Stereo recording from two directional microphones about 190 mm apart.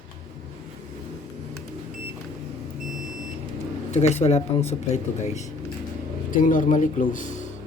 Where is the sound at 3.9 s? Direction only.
35° left (ahead or behind).